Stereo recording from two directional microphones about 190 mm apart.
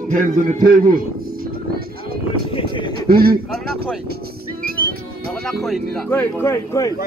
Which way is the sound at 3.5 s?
Centre (ahead or behind).